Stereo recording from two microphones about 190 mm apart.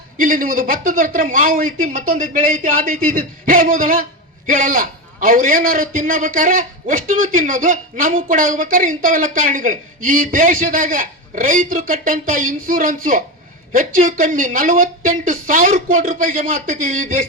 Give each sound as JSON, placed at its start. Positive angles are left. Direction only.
{"t": 0.2, "sound": "a man's voice", "side_deg": -45}